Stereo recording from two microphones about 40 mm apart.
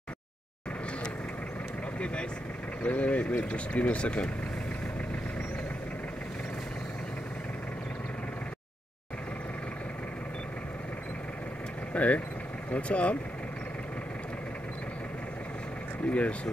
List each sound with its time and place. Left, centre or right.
2.8 s speech: left
11.9 s speech: left
16.1 s speech: left